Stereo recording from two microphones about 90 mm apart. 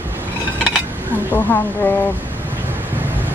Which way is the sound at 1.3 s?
20° left (ahead or behind).